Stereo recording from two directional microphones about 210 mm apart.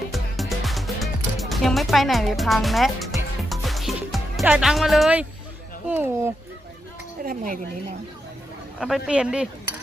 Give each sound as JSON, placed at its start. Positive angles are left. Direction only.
{"t": 0.1, "sound": "music", "side_deg": 0}
{"t": 5.9, "sound": "speech", "side_deg": -10}
{"t": 7.3, "sound": "speech", "side_deg": -40}
{"t": 8.8, "sound": "speech", "side_deg": -5}